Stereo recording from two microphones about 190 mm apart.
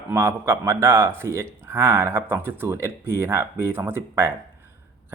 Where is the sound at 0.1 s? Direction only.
15° right (ahead or behind).